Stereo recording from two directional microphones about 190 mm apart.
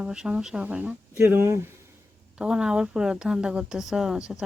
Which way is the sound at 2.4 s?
5° right (ahead or behind).